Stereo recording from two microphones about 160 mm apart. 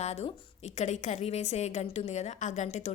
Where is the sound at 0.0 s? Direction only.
45° left (ahead or behind).